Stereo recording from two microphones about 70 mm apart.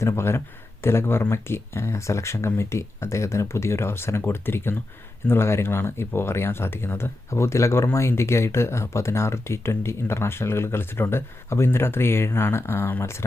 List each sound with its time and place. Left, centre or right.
0.0 s speech: left